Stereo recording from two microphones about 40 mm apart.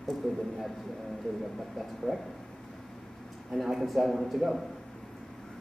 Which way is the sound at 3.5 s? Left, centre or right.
Centre.